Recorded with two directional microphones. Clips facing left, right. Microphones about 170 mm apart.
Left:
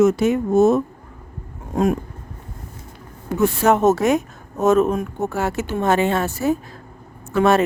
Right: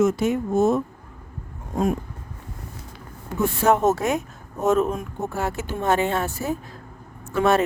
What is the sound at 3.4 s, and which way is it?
Speech, 85° left.